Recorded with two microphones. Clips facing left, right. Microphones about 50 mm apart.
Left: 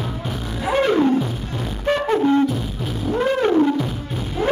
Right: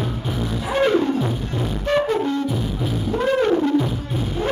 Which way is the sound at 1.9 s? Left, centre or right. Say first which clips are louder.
Right 1 dB; centre.